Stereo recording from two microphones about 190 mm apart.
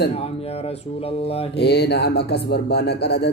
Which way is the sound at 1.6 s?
60° left (ahead or behind).